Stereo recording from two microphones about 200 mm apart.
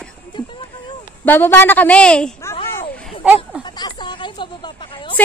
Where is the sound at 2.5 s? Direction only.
25° left (ahead or behind).